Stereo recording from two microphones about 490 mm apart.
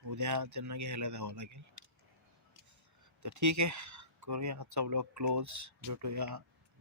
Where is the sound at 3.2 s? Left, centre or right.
Right.